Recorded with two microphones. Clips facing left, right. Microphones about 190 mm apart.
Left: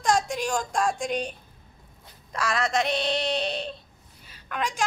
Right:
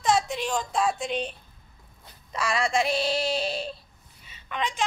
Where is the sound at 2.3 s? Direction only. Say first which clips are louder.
Even; 5° right (ahead or behind).